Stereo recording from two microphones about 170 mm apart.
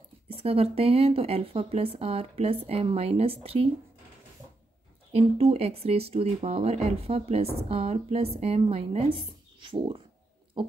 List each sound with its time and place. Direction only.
0.3 s speech: 35° right (ahead or behind)
5.1 s speech: 35° right (ahead or behind)
10.6 s a sound: 30° right (ahead or behind)